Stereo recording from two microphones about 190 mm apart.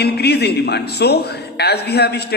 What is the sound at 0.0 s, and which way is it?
Speech, 60° left (ahead or behind).